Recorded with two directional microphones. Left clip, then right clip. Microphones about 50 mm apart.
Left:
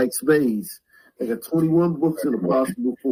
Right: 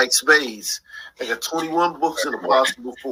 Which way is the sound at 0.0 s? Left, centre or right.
Right.